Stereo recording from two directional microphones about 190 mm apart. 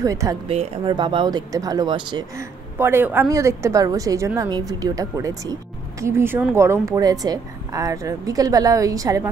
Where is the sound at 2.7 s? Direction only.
10° right (ahead or behind).